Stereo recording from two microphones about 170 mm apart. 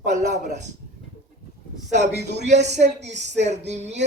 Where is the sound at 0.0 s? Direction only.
45° right (ahead or behind).